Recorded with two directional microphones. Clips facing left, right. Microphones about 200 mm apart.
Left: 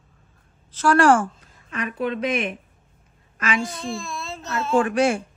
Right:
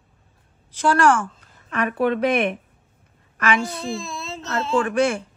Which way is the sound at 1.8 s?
60° right (ahead or behind).